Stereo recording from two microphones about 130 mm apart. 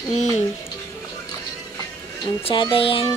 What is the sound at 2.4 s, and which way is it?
Speech, 40° left (ahead or behind).